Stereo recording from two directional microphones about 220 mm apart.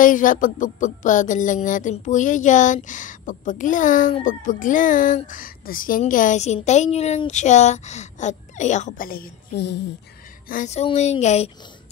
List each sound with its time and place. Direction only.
0.0 s music: 35° left (ahead or behind)
10.5 s music: 35° left (ahead or behind)